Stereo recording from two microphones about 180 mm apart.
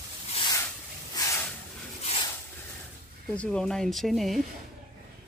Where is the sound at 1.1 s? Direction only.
15° left (ahead or behind).